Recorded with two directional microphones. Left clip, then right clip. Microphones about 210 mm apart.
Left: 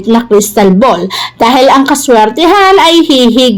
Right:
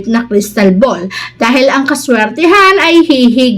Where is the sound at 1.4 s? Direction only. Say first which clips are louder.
Left 4 dB; 25° left (ahead or behind).